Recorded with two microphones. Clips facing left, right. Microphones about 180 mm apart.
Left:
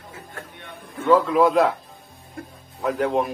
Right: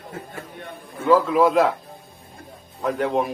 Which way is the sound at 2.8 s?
Centre (ahead or behind).